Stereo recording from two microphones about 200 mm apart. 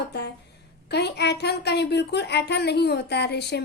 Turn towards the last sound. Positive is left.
turn(degrees=55)  # may be behind; listen again after turning